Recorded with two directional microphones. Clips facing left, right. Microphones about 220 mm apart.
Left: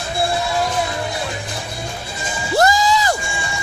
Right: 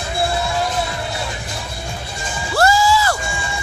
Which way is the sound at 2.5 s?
20° left (ahead or behind).